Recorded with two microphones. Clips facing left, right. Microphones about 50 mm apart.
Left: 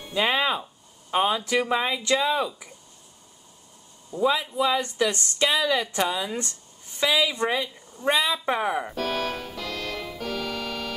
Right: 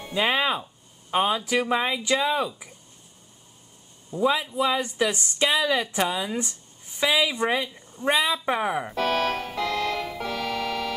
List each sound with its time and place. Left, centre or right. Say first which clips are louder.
0.1 s speech: even; centre
4.2 s speech: even; centre
8.9 s music: right 4 dB; right